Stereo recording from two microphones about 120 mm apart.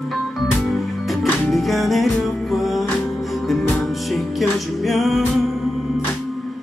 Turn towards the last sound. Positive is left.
turn(degrees=0)  # may be behind; listen again after turning